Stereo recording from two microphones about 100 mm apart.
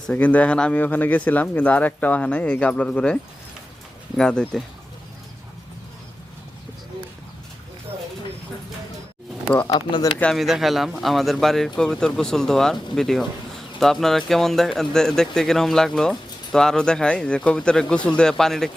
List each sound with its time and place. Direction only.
0.1 s speech: 15° left (ahead or behind)
4.2 s speech: 5° left (ahead or behind)
9.6 s speech: 40° left (ahead or behind)
10.3 s speech: 5° right (ahead or behind)